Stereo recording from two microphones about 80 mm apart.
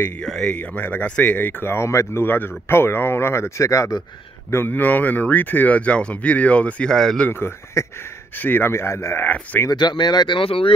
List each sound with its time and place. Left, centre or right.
0.2 s speech: centre
0.6 s speech: left
1.6 s speech: left
4.5 s speech: left; by 7.2 s centre
7.2 s speech: left
9.7 s speech: left